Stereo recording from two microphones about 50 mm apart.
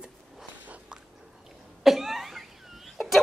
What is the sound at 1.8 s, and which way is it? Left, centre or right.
Cough, centre.